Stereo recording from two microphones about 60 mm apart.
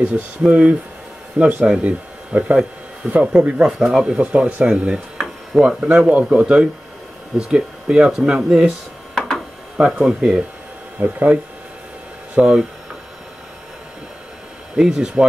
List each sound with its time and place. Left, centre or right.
0.5 s speech: centre
3.6 s speech: centre
5.1 s a sound: centre
5.8 s speech: centre
11.0 s speech: right
12.4 s speech: centre
14.8 s speech: centre